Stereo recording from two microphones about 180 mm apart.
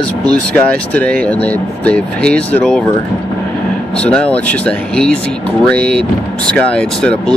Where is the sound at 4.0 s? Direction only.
5° left (ahead or behind).